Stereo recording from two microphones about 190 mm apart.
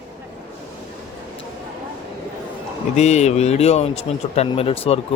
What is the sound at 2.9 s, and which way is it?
A man's voice, 35° left (ahead or behind).